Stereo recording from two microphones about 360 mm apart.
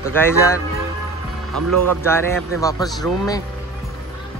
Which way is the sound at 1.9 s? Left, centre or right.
Centre.